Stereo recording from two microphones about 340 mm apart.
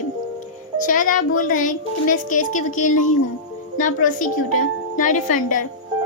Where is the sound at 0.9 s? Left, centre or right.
Left.